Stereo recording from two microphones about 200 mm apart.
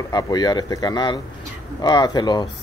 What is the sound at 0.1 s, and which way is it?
Speech, 20° left (ahead or behind).